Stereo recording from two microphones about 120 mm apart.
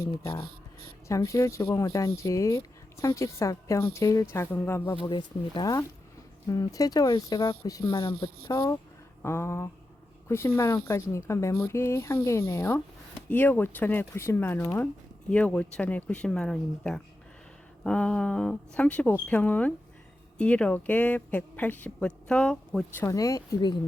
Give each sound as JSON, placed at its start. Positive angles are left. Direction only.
{"t": 0.0, "sound": "speech", "side_deg": 25}
{"t": 5.1, "sound": "speech", "side_deg": 35}
{"t": 23.0, "sound": "speech", "side_deg": 30}